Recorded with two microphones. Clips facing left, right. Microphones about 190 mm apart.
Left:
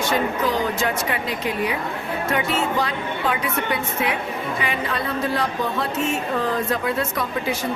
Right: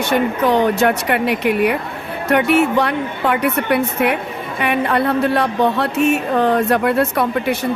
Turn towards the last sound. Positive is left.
turn(degrees=-65)  # may be behind; listen again after turning